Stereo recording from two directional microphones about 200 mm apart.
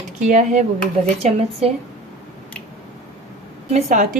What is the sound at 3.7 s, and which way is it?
Speech, 35° right (ahead or behind).